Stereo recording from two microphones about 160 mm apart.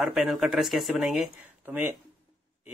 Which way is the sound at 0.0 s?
Centre (ahead or behind).